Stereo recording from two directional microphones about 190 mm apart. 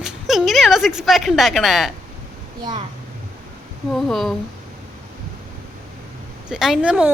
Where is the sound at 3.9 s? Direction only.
Centre (ahead or behind).